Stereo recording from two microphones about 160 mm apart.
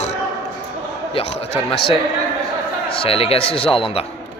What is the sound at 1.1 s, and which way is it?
A man's voice, 40° left (ahead or behind).